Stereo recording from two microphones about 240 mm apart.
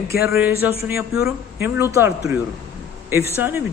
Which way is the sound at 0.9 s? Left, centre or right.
Centre.